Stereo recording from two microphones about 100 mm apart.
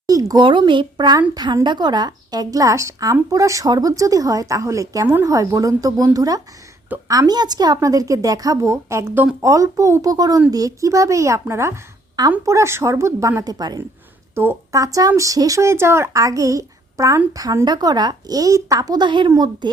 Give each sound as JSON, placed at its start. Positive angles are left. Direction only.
{"t": 0.1, "sound": "a sound", "side_deg": -35}
{"t": 0.3, "sound": "speech", "side_deg": -50}
{"t": 14.3, "sound": "speech", "side_deg": -30}